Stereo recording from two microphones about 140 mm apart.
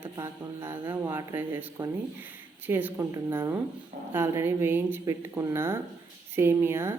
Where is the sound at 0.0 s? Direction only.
20° right (ahead or behind).